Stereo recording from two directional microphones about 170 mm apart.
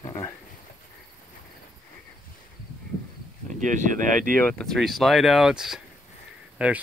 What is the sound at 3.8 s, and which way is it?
Speech, 50° right (ahead or behind).